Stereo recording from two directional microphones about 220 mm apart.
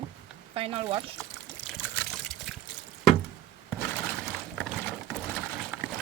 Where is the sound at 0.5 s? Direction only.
25° right (ahead or behind).